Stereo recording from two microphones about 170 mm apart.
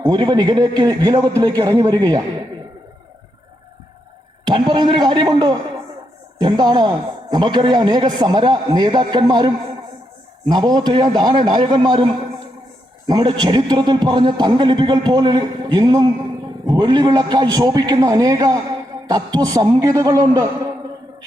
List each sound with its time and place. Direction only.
0.0 s a man's voice: 25° right (ahead or behind)
4.5 s a man's voice: 30° right (ahead or behind)
10.5 s a man's voice: 25° right (ahead or behind)